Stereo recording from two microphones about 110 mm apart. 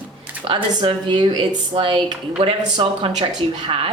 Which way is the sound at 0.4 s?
50° right (ahead or behind).